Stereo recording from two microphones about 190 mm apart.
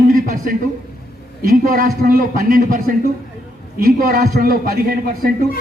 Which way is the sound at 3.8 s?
50° right (ahead or behind).